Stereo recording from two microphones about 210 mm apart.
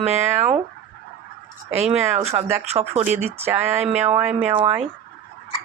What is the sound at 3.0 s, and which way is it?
Speech, 10° right (ahead or behind).